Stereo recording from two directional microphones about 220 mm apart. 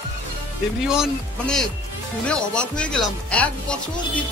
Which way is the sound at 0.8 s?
Centre (ahead or behind).